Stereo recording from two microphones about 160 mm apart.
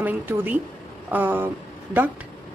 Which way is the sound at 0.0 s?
10° right (ahead or behind).